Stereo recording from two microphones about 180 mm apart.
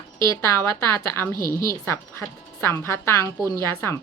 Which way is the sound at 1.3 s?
50° left (ahead or behind).